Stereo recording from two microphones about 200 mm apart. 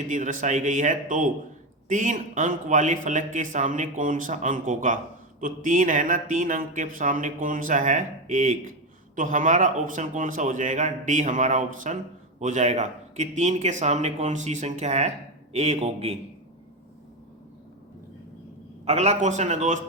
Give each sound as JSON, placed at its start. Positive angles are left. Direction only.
{"t": 0.1, "sound": "speech", "side_deg": -40}
{"t": 18.9, "sound": "speech", "side_deg": -35}